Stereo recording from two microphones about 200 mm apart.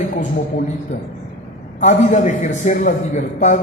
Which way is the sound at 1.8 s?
35° left (ahead or behind).